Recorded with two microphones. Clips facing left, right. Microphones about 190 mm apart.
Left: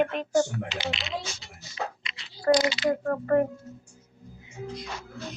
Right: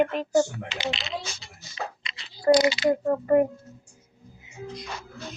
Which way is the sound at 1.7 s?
30° right (ahead or behind).